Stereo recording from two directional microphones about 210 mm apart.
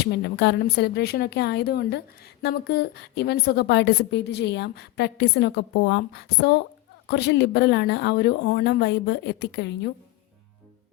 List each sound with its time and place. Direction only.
0.0 s speech: 55° left (ahead or behind)